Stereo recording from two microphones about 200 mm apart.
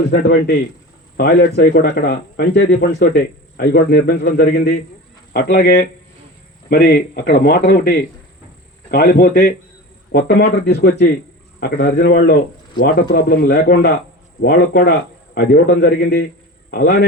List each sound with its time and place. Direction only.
1.1 s speech: 55° left (ahead or behind)
6.7 s a man's voice: 45° left (ahead or behind)